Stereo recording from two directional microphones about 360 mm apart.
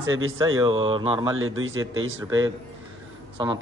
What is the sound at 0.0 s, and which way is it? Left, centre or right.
Speech, right.